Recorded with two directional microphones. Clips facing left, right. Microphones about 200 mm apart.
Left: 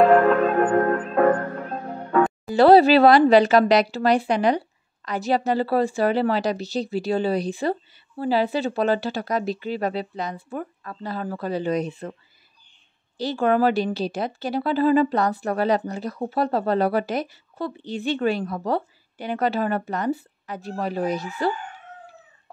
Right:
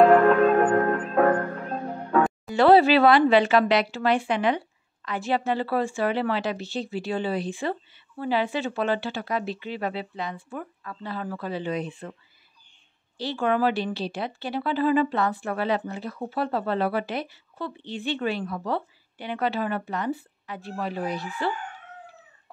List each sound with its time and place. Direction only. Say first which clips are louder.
0.0 s church bell: even; centre (ahead or behind)
2.1 s music: left 2 dB; centre (ahead or behind)
2.5 s speech: left 3 dB; 40° left (ahead or behind)
13.2 s speech: left 4 dB; 45° left (ahead or behind)